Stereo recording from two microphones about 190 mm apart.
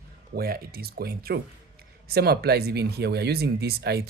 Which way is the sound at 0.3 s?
50° right (ahead or behind).